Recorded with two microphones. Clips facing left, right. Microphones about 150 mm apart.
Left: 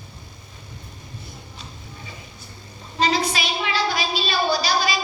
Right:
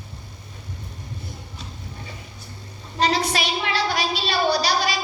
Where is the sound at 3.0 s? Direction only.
65° right (ahead or behind).